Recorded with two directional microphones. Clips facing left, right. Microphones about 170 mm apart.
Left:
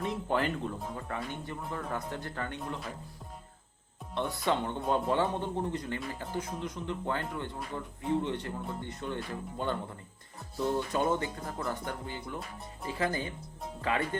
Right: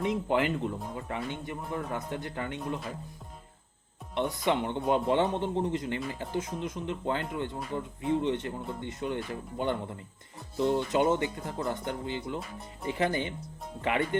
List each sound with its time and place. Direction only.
0.0 s speech: 20° right (ahead or behind)
4.1 s speech: 20° right (ahead or behind)